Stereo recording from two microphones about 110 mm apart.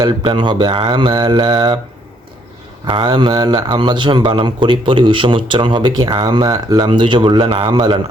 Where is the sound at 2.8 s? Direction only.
50° right (ahead or behind).